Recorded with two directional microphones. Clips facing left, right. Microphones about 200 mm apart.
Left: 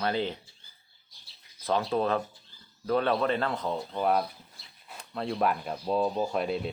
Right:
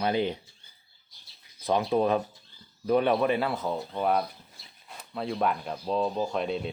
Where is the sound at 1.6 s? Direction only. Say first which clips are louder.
Right 3 dB; 15° right (ahead or behind).